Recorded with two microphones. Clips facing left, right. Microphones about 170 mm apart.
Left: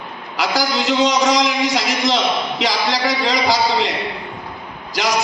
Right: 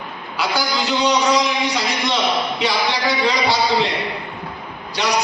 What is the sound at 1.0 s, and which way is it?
A man's voice, 90° left.